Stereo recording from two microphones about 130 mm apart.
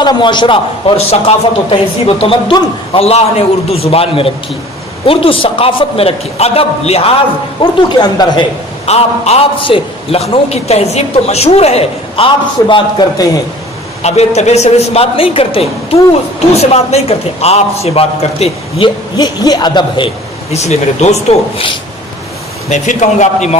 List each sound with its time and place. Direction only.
0.0 s a man's voice: 35° left (ahead or behind); by 7.2 s 50° left (ahead or behind)
8.0 s a man's voice: 35° left (ahead or behind)
8.8 s a man's voice: 55° left (ahead or behind); by 13.4 s 35° left (ahead or behind)
14.0 s a woman's voice: 55° left (ahead or behind)
19.1 s a man's voice: 30° left (ahead or behind)
20.5 s a woman's voice: 60° left (ahead or behind)
22.7 s a woman's voice: 70° left (ahead or behind)